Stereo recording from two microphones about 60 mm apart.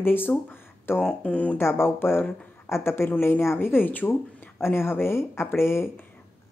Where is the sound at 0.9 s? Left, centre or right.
Left.